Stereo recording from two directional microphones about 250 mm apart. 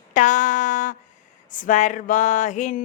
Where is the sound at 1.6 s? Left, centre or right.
Left.